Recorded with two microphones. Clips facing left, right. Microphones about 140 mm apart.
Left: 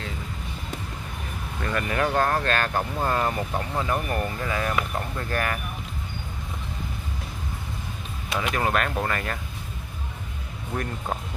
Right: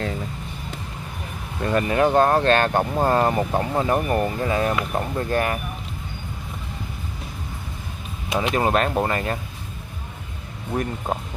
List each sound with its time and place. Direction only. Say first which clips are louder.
1.6 s speech: right 6 dB; 25° right (ahead or behind)
8.4 s speech: right 5 dB; 25° right (ahead or behind)
10.7 s speech: right 5 dB; 20° right (ahead or behind)